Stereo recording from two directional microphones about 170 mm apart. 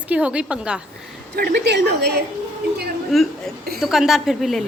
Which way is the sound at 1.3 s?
70° right (ahead or behind).